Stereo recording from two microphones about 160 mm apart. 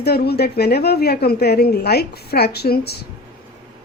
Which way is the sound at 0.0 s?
85° left.